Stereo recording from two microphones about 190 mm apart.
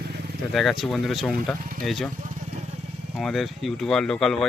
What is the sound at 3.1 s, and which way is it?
Speech, centre (ahead or behind).